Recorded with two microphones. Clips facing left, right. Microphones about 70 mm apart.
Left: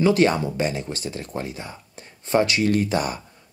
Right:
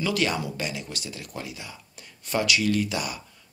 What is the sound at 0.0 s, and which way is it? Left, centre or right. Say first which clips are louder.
Speech: left 8 dB; left.